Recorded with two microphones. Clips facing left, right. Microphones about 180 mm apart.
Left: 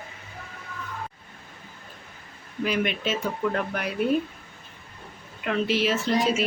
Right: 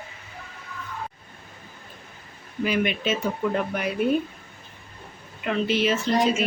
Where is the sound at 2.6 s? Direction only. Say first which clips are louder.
Right 2 dB; centre (ahead or behind).